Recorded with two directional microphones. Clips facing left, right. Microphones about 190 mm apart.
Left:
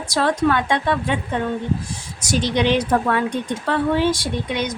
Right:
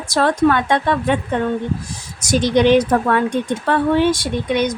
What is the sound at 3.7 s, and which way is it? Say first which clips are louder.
Speech: right 3 dB; 55° right (ahead or behind).